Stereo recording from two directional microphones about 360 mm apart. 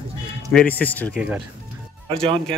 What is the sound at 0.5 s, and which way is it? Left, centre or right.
Speech, centre.